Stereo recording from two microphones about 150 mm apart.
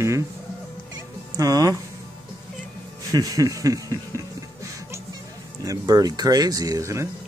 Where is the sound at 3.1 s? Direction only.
25° right (ahead or behind).